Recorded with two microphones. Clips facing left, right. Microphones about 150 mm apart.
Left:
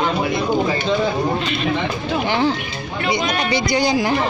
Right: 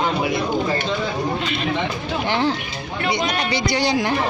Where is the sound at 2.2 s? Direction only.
5° left (ahead or behind).